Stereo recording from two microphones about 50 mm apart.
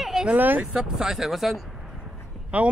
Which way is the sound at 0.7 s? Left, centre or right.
Centre.